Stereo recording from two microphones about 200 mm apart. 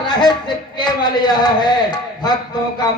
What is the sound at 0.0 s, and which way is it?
A man's voice, 20° left (ahead or behind).